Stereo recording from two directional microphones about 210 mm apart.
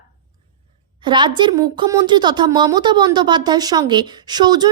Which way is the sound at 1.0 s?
20° right (ahead or behind).